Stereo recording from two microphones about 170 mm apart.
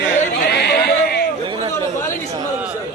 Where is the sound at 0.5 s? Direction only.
70° left (ahead or behind).